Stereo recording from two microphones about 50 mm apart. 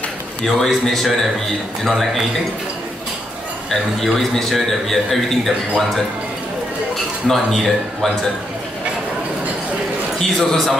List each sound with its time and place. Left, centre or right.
0.6 s a man's voice: centre
3.7 s a man's voice: centre
7.2 s speech: centre
10.1 s a man's voice: centre